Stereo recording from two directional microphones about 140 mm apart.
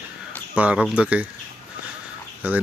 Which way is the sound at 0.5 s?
5° right (ahead or behind).